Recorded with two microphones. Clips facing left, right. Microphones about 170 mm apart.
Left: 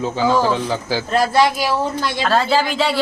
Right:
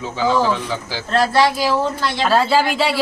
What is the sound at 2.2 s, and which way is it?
Speech, 5° right (ahead or behind).